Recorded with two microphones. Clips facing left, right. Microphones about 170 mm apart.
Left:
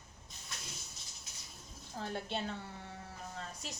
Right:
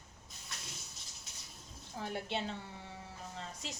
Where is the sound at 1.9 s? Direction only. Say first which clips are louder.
Even; 15° right (ahead or behind).